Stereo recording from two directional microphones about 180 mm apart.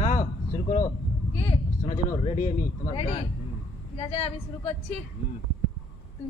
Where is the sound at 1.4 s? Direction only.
40° left (ahead or behind).